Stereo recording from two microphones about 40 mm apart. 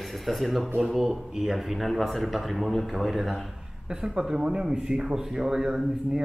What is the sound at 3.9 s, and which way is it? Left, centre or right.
Speech, centre.